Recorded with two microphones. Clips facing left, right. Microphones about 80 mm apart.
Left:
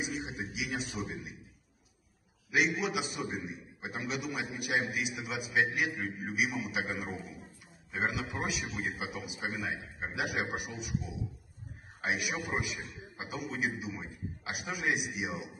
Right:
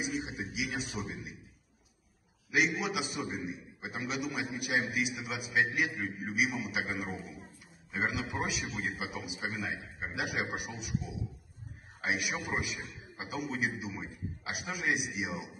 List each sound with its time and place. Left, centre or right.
0.3 s a sound: centre
1.0 s a man's voice: centre
2.5 s a man's voice: centre
12.4 s a man's voice: centre